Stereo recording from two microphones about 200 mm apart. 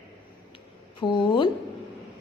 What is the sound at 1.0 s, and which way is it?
Speech, 25° left (ahead or behind).